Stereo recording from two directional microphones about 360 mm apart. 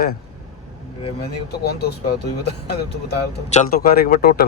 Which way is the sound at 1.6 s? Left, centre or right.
Left.